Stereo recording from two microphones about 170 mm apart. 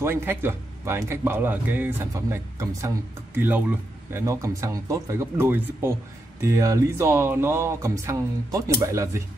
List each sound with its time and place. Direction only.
0.0 s speech: 10° right (ahead or behind)